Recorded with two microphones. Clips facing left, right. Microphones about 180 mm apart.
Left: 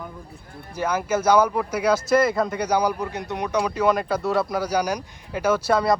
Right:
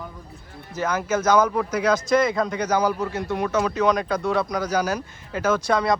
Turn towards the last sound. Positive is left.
turn(degrees=5)  # may be behind; listen again after turning